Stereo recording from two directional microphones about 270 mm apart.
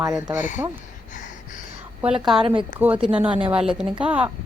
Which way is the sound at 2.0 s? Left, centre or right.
Centre.